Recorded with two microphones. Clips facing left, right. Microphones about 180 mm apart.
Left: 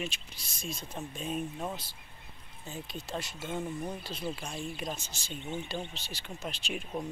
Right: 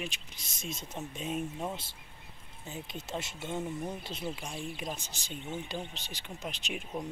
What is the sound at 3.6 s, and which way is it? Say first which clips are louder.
Speech: even; 5° right (ahead or behind).